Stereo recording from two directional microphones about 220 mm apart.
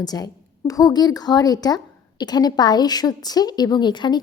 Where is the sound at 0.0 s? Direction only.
15° left (ahead or behind).